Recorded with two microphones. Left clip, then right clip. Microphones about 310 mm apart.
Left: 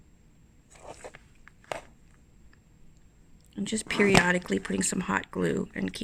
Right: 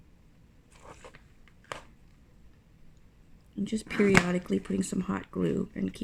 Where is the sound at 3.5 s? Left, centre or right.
Left.